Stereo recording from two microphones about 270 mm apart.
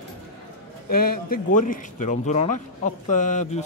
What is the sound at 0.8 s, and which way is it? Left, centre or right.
Speech, left.